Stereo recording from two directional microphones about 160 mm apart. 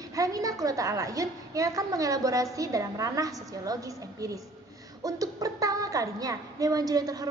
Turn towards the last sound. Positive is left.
turn(degrees=-25)  # may be behind; listen again after turning